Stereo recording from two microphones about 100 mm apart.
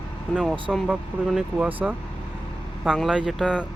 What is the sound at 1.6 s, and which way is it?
Speech, 20° right (ahead or behind).